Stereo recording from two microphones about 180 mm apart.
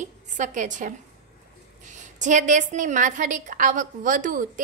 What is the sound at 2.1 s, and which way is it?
A woman's voice, 45° right (ahead or behind).